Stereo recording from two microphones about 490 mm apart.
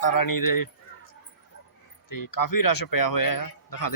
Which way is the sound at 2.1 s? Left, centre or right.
Left.